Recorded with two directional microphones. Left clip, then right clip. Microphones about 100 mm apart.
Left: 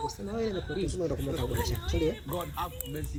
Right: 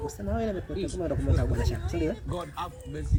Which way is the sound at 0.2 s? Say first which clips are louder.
Right 4 dB; 50° right (ahead or behind).